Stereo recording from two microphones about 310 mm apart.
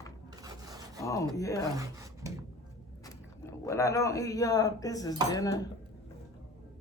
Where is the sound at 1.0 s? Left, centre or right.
Centre.